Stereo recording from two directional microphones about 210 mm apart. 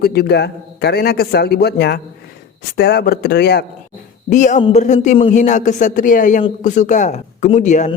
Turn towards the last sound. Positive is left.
turn(degrees=35)  # may be behind; listen again after turning